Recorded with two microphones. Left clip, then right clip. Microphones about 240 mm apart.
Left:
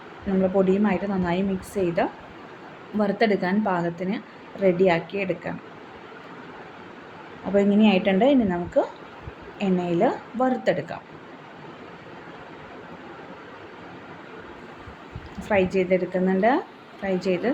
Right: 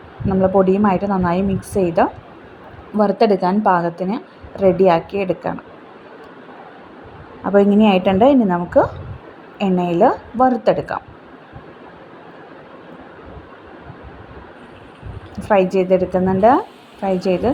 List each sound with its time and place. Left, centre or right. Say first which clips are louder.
0.5 s a woman's voice: right 7 dB; centre
7.5 s a woman's voice: right 7 dB; right
15.4 s a woman's voice: right 7 dB; centre